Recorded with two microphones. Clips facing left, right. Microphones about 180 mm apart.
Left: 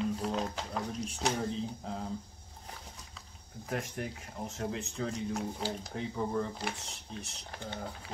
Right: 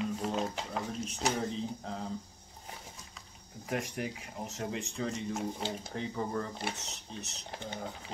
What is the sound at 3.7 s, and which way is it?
Speech, 5° right (ahead or behind).